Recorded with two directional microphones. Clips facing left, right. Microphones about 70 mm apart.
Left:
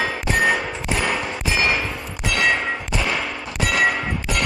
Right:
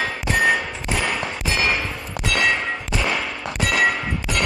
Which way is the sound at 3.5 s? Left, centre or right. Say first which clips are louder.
Even; centre.